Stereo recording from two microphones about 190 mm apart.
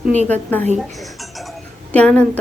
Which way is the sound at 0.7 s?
Centre (ahead or behind).